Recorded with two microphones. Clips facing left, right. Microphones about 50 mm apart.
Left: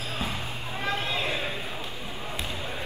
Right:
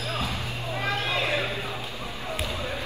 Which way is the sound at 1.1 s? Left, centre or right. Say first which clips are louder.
Right 3 dB; right.